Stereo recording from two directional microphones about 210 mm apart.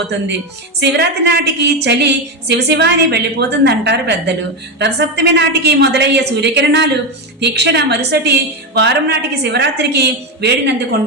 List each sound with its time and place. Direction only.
0.8 s a woman's voice: 50° right (ahead or behind)